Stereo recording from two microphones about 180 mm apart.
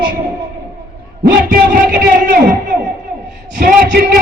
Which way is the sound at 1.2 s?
55° right (ahead or behind).